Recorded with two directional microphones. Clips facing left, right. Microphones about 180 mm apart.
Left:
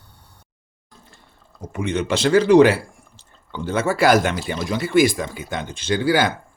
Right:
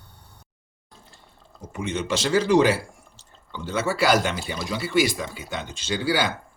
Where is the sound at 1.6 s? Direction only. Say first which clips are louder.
Left 5 dB; 60° left (ahead or behind).